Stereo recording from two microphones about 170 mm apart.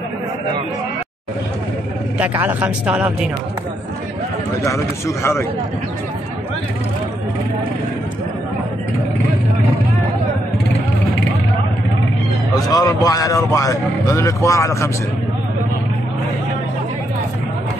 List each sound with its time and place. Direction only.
2.4 s speech: 10° right (ahead or behind)
4.6 s a man's voice: 15° left (ahead or behind)
12.5 s speech: 20° left (ahead or behind)